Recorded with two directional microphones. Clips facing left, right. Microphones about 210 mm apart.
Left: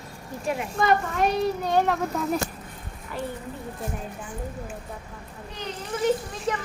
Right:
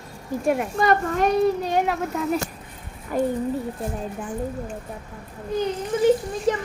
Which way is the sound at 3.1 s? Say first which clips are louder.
Right 10 dB; 45° right (ahead or behind).